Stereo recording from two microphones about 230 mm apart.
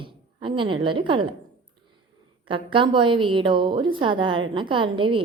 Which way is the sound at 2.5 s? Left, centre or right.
Right.